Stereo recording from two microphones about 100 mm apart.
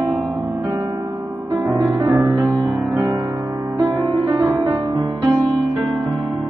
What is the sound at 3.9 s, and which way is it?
Music, 40° right (ahead or behind).